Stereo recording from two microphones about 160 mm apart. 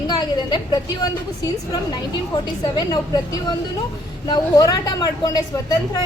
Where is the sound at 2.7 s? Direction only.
25° left (ahead or behind).